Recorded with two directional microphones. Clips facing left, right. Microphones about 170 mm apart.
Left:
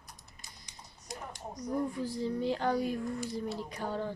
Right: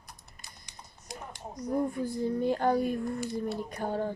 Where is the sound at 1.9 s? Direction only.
50° right (ahead or behind).